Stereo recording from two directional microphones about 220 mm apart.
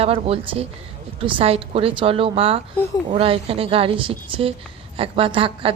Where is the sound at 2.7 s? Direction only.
10° left (ahead or behind).